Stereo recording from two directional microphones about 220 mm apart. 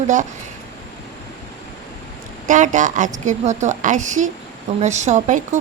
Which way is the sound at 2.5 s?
35° right (ahead or behind).